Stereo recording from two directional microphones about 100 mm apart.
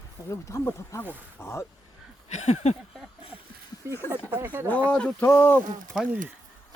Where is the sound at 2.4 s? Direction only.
90° left.